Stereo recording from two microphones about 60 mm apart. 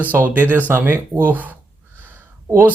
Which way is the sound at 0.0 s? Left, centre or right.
Right.